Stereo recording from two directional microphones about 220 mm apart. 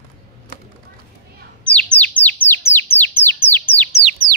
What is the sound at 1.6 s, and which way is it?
Bird, 5° left (ahead or behind).